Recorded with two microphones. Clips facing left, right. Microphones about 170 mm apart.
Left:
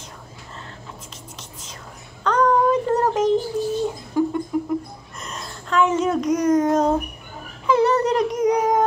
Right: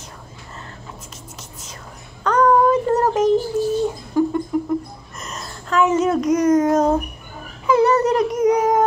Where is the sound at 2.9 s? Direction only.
10° right (ahead or behind).